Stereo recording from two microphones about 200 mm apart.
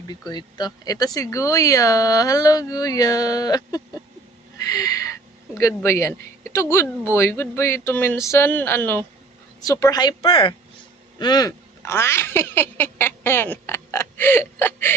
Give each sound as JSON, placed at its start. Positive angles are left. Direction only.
{"t": 0.1, "sound": "speech", "side_deg": 20}
{"t": 4.6, "sound": "a sound", "side_deg": 15}
{"t": 5.5, "sound": "speech", "side_deg": 15}